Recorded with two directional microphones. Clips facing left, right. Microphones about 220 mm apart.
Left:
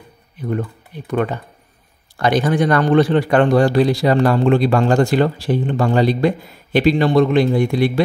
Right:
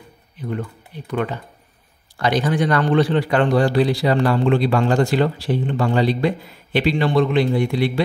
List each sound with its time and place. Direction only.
1.1 s speech: 45° left (ahead or behind)